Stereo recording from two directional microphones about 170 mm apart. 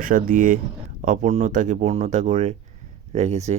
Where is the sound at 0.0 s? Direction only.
50° right (ahead or behind).